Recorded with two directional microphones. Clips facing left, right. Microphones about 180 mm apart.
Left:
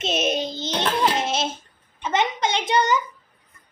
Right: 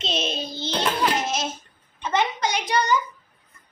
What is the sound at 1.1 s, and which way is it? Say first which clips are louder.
A child's voice: left 2 dB; 30° left (ahead or behind).